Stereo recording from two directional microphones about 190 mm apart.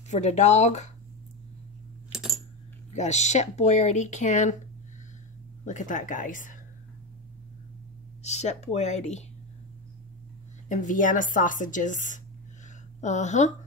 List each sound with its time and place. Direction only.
0.1 s speech: 35° left (ahead or behind)
3.0 s speech: 35° left (ahead or behind)
5.7 s a woman's voice: 40° left (ahead or behind)
8.2 s speech: 35° left (ahead or behind)
10.7 s a woman's voice: 40° left (ahead or behind)